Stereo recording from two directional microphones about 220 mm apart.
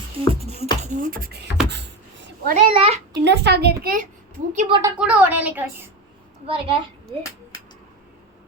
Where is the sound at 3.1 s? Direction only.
50° right (ahead or behind); by 4.7 s 35° right (ahead or behind).